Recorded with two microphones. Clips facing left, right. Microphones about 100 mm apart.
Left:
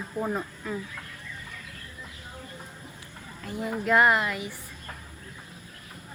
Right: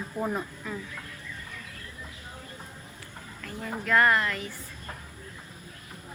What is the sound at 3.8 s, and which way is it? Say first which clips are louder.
Speech: left 1 dB; 15° left (ahead or behind).